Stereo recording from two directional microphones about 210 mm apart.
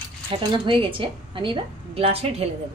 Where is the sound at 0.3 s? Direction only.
25° right (ahead or behind).